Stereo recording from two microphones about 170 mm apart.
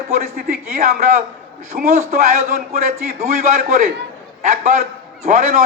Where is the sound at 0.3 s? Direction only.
60° right (ahead or behind).